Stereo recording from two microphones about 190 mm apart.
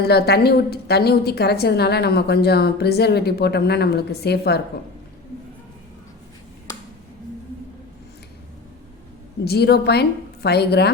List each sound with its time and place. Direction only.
0.0 s a woman's voice: 55° left (ahead or behind)
9.4 s a woman's voice: 55° left (ahead or behind)